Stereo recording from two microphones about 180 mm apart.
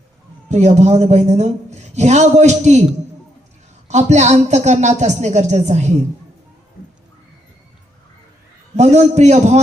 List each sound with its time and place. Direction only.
0.4 s a man's voice: 40° right (ahead or behind)
3.8 s a man's voice: 40° right (ahead or behind)
8.7 s a man's voice: 40° right (ahead or behind)